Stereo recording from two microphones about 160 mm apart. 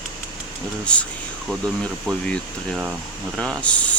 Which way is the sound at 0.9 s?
5° left (ahead or behind).